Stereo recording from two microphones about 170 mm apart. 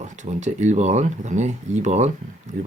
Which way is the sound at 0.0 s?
45° right (ahead or behind).